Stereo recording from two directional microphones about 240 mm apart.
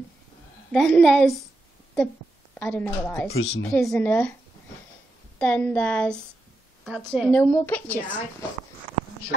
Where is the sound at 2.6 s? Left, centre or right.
Centre.